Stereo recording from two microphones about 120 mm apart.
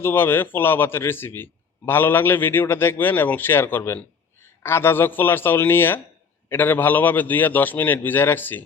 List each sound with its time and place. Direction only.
0.0 s a man's voice: 20° left (ahead or behind)